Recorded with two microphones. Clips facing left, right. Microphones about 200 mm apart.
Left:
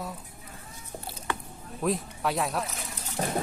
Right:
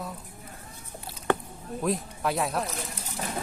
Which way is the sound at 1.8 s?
Centre (ahead or behind).